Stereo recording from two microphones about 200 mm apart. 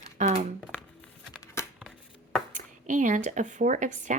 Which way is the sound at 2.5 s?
40° right (ahead or behind).